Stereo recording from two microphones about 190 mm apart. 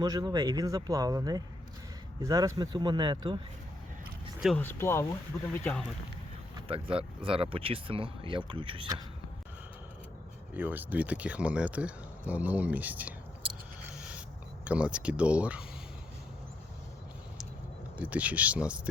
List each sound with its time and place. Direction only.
0.0 s speech: 20° right (ahead or behind)
4.4 s speech: centre (ahead or behind)
4.6 s speech: 10° left (ahead or behind)
6.7 s speech: 30° right (ahead or behind)
10.5 s speech: 10° right (ahead or behind)
14.6 s speech: 5° right (ahead or behind)
17.9 s speech: 5° right (ahead or behind)